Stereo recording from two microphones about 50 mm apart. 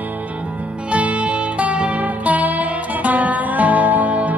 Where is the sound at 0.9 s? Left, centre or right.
Right.